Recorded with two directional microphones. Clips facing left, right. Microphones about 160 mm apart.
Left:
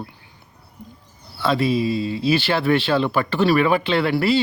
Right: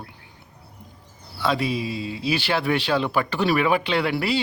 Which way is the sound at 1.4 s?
15° right (ahead or behind).